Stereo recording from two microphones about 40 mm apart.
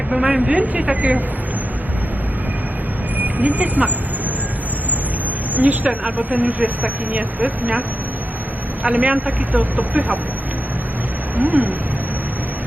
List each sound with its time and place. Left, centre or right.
0.1 s a woman's voice: right
0.4 s speech: right
3.2 s speech: right
5.5 s speech: right
11.3 s speech: right